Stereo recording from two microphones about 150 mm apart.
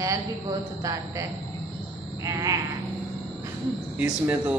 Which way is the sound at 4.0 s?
10° right (ahead or behind).